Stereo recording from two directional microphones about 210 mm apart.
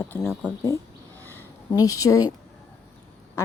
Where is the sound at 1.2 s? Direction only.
10° left (ahead or behind).